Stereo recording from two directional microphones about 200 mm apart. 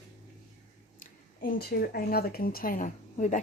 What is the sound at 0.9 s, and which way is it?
Speech, 45° left (ahead or behind).